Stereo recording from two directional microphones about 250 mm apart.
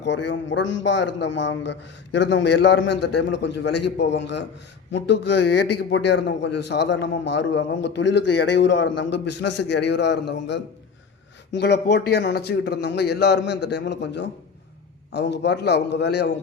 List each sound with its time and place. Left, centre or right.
0.0 s a man's voice: left
11.5 s a man's voice: left